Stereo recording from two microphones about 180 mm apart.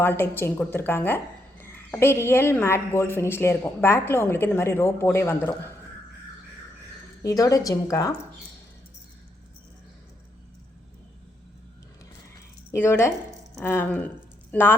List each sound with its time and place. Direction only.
0.0 s a woman's voice: 10° left (ahead or behind)
7.2 s a woman's voice: 20° left (ahead or behind)
12.7 s a woman's voice: 15° left (ahead or behind)